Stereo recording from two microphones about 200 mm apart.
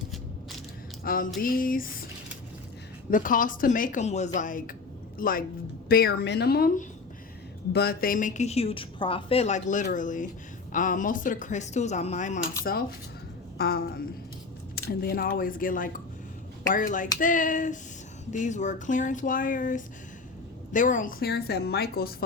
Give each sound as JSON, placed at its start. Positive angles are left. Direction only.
{"t": 1.0, "sound": "a woman's voice", "side_deg": 45}
{"t": 3.1, "sound": "a woman's voice", "side_deg": 40}
{"t": 13.6, "sound": "a woman's voice", "side_deg": 50}